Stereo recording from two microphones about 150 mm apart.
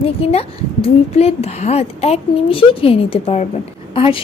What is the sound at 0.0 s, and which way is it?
A woman's voice, 40° left (ahead or behind).